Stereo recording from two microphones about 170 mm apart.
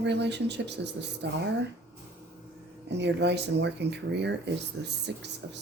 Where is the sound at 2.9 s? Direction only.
90° right.